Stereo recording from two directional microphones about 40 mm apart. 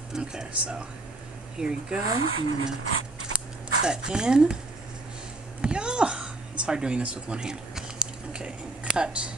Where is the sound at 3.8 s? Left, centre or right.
Right.